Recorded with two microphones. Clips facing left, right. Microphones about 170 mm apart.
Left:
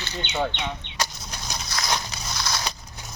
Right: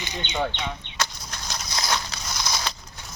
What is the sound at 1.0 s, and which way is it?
Chicken, 15° left (ahead or behind).